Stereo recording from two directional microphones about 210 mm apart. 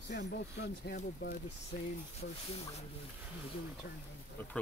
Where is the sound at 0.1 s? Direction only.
55° left (ahead or behind).